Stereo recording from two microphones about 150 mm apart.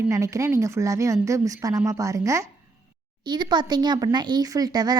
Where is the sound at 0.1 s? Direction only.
20° right (ahead or behind).